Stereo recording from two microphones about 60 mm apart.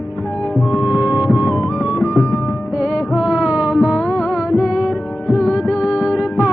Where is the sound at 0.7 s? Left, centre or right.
Centre.